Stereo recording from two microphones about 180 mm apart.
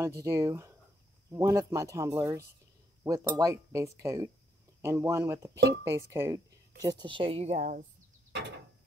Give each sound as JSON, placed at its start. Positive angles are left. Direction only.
{"t": 0.0, "sound": "speech", "side_deg": -15}